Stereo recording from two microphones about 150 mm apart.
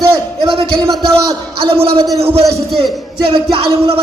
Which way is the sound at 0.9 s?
25° right (ahead or behind).